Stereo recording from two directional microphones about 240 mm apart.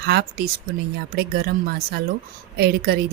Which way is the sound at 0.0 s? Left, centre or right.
Right.